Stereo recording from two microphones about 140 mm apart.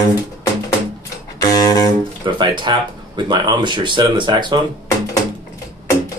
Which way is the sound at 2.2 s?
35° right (ahead or behind).